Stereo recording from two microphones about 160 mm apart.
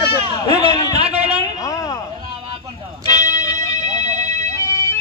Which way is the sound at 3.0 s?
25° left (ahead or behind).